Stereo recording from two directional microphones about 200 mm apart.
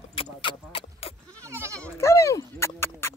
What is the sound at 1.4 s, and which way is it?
Goat, 15° right (ahead or behind).